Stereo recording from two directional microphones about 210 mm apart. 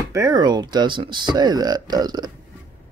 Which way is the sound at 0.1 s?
15° right (ahead or behind).